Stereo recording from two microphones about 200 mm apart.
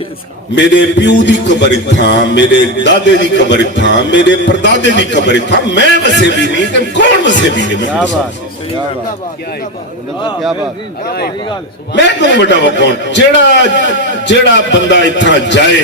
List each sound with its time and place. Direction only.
0.5 s a man's voice: 60° left (ahead or behind)
11.9 s a man's voice: 60° left (ahead or behind)